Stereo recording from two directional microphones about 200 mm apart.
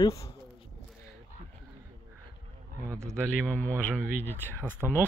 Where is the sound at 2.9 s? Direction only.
15° right (ahead or behind).